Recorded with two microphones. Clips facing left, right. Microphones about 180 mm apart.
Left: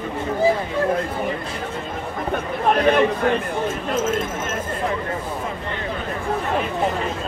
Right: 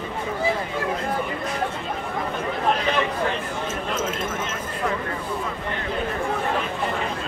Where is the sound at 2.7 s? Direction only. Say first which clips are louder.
Left 7 dB; 55° left (ahead or behind).